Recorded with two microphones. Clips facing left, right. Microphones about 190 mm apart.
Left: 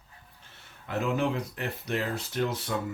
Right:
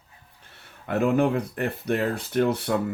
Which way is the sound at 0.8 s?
55° right (ahead or behind).